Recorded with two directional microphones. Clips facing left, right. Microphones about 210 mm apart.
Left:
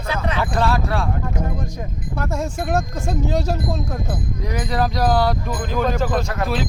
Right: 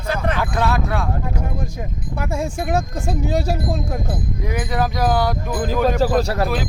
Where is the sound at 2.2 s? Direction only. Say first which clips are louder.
Right 1 dB; 10° right (ahead or behind).